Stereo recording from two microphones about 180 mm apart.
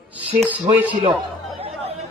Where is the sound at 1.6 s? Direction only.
35° right (ahead or behind).